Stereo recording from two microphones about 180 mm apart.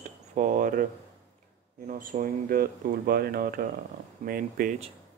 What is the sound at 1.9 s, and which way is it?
Speech, 50° right (ahead or behind).